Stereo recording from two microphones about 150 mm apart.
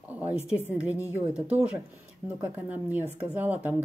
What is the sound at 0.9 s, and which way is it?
Speech, 20° left (ahead or behind).